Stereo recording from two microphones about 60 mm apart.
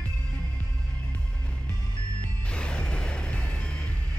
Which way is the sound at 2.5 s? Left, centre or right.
Centre.